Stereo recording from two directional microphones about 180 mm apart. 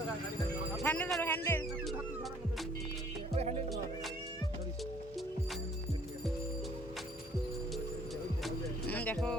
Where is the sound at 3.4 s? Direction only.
35° right (ahead or behind).